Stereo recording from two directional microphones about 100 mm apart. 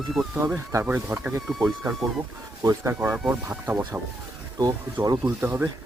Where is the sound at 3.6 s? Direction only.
15° right (ahead or behind).